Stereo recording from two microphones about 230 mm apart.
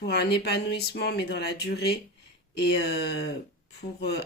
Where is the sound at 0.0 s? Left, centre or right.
Left.